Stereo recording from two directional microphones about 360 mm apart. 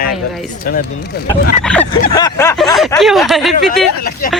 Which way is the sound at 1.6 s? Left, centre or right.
Centre.